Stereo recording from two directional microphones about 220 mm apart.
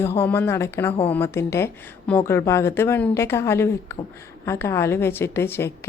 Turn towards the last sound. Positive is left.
turn(degrees=10)  # may be behind; listen again after turning